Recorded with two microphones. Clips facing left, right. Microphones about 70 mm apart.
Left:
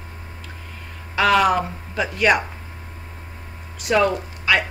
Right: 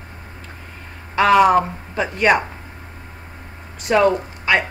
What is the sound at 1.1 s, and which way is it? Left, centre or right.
A man's voice, right.